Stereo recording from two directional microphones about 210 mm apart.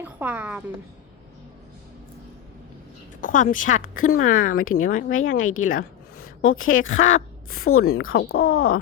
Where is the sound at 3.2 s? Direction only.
40° left (ahead or behind).